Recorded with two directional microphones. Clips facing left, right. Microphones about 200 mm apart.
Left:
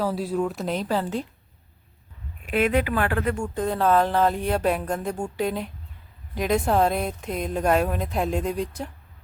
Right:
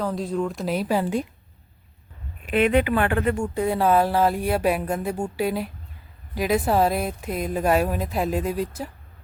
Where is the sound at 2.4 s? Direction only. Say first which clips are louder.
Right 3 dB; centre (ahead or behind).